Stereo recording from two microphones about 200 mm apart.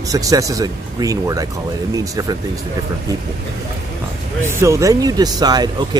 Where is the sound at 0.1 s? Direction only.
15° right (ahead or behind).